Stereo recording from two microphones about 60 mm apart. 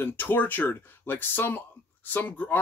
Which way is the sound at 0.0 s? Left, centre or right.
Left.